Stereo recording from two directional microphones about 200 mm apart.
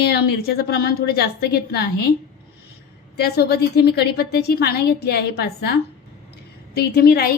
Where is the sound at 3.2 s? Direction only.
55° left (ahead or behind).